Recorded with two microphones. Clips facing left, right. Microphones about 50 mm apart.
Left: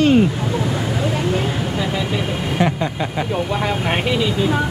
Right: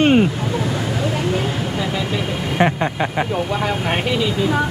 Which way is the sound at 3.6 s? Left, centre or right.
Centre.